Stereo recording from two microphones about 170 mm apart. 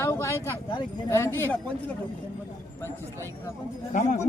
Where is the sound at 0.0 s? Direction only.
15° left (ahead or behind).